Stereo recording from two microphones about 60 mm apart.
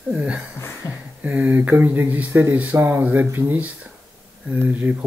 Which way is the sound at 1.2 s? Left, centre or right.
Right.